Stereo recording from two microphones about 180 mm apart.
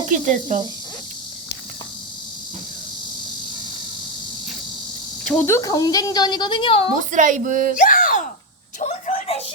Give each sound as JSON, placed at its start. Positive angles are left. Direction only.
{"t": 0.5, "sound": "speech", "side_deg": -45}
{"t": 5.2, "sound": "a woman's voice", "side_deg": 10}
{"t": 7.1, "sound": "speech", "side_deg": -45}
{"t": 7.8, "sound": "a sound", "side_deg": 50}